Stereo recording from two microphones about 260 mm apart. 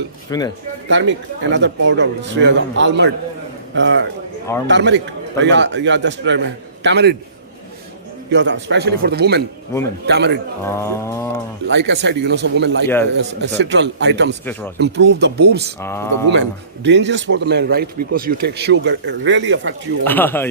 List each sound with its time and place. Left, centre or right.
0.3 s speech: centre
0.9 s a man's voice: right
8.3 s a man's voice: right
10.6 s speech: centre
11.7 s a man's voice: right
15.8 s speech: centre
16.8 s a man's voice: right
20.1 s speech: centre